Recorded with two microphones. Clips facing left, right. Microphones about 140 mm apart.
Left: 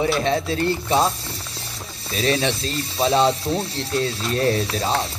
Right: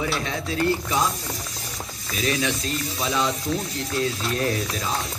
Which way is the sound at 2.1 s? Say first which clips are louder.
Left 4 dB; 30° left (ahead or behind).